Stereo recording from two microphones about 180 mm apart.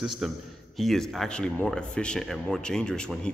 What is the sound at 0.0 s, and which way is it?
A man's voice, centre (ahead or behind).